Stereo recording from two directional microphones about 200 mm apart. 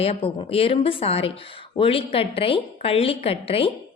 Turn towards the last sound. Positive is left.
turn(degrees=30)  # may be behind; listen again after turning